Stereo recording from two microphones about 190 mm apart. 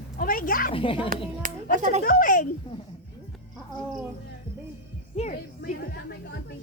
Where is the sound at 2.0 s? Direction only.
45° left (ahead or behind).